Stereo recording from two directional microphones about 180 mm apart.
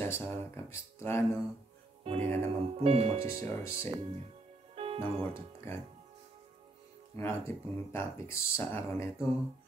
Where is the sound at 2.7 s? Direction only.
35° right (ahead or behind).